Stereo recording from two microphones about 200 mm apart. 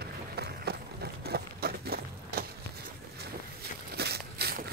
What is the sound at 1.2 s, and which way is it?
Walk, 50° right (ahead or behind).